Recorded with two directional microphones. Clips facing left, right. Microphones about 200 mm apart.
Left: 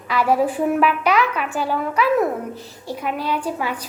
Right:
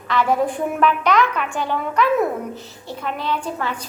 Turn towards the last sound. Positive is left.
turn(degrees=10)  # may be behind; listen again after turning